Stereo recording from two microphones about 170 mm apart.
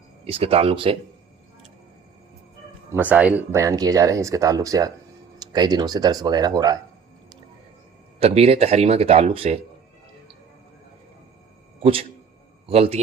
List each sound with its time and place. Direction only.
0.3 s speech: 35° right (ahead or behind)
2.9 s speech: 10° right (ahead or behind)
8.2 s speech: 35° right (ahead or behind)
11.8 s a man's voice: 35° right (ahead or behind)